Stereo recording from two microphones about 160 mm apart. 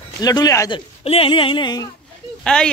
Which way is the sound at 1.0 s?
35° left (ahead or behind).